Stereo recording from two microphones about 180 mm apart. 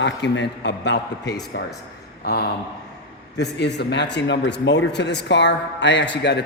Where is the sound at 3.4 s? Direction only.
70° left (ahead or behind).